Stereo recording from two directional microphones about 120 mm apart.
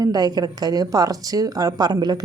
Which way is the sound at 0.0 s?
35° right (ahead or behind).